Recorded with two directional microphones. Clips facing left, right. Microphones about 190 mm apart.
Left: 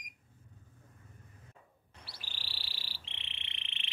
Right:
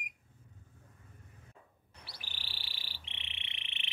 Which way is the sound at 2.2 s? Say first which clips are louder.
Even; 15° right (ahead or behind).